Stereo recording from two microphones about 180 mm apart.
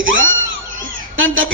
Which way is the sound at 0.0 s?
90° right.